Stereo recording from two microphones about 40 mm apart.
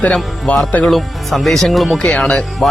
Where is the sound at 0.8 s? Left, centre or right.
Centre.